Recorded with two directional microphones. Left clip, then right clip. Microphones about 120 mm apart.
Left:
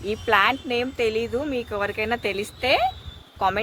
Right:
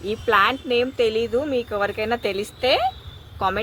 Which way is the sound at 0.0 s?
60° left (ahead or behind).